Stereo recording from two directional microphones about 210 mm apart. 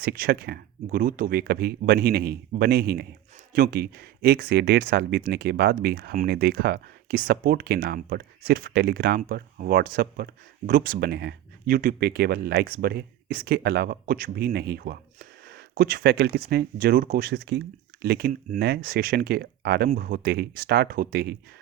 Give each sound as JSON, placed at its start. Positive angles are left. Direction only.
{"t": 0.0, "sound": "speech", "side_deg": -45}